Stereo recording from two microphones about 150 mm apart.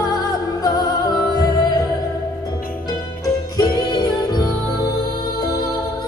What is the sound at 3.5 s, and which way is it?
Music, 25° left (ahead or behind).